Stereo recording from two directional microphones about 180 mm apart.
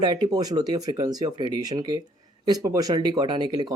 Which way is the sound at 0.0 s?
25° right (ahead or behind).